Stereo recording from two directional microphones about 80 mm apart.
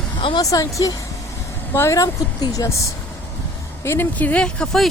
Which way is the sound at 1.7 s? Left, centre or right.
Left.